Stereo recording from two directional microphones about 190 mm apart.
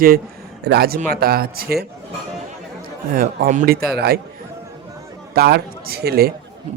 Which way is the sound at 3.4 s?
45° right (ahead or behind).